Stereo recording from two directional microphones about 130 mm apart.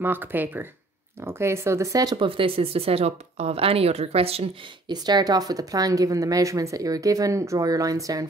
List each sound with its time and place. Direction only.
0.0 s speech: 15° right (ahead or behind)
2.1 s speech: 40° right (ahead or behind)
4.8 s speech: 30° right (ahead or behind)